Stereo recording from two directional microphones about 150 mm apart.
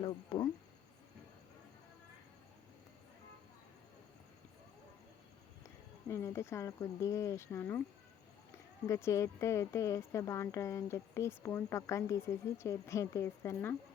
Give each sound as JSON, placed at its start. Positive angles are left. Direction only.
{"t": 0.0, "sound": "a sound", "side_deg": 30}
{"t": 6.1, "sound": "speech", "side_deg": 20}
{"t": 8.9, "sound": "speech", "side_deg": 20}